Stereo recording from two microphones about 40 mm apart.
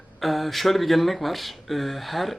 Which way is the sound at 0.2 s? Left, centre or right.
Centre.